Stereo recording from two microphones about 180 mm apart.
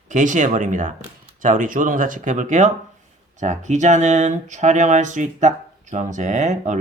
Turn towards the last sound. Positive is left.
turn(degrees=-40)  # may be behind; listen again after turning